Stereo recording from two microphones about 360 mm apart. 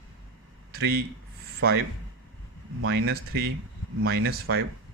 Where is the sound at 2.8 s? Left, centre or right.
Right.